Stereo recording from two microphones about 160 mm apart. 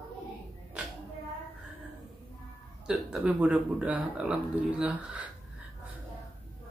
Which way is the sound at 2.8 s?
5° right (ahead or behind).